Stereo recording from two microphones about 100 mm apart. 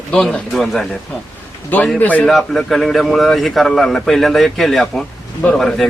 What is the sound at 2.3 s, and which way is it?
A man's voice, 5° left (ahead or behind).